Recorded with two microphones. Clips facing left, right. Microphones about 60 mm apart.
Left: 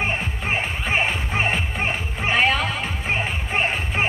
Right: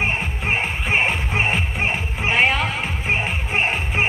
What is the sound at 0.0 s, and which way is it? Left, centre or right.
Music, centre.